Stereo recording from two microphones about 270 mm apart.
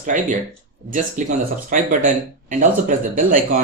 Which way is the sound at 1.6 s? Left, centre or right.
Right.